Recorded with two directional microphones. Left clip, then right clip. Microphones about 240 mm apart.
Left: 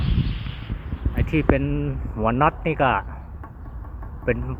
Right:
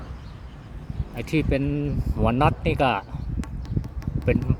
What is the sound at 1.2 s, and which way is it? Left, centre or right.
Speech, centre.